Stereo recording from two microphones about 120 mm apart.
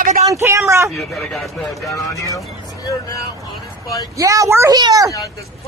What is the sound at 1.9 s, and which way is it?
A woman's voice, 25° left (ahead or behind).